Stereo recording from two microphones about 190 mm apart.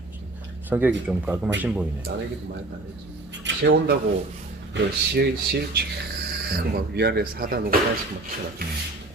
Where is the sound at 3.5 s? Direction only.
75° right (ahead or behind).